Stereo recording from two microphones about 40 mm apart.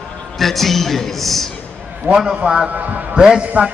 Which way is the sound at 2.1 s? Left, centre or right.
Centre.